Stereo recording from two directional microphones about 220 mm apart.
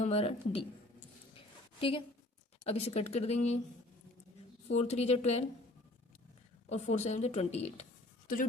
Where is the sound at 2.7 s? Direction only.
30° left (ahead or behind).